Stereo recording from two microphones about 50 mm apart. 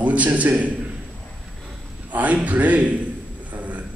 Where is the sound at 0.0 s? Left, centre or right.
Right.